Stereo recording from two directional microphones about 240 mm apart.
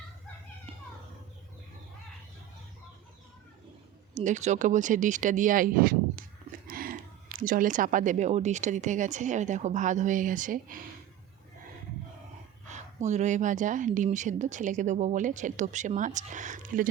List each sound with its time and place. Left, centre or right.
4.1 s speech: right
12.6 s speech: right